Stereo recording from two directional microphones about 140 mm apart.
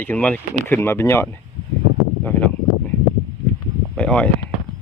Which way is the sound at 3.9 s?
5° left (ahead or behind).